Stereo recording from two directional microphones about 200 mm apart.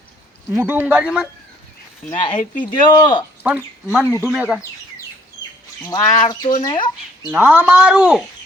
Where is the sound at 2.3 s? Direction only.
40° left (ahead or behind).